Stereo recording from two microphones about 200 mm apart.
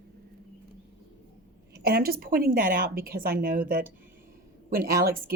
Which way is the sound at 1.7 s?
50° right (ahead or behind).